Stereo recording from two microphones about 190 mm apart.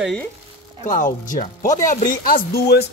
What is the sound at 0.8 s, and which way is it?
Speech, 40° left (ahead or behind).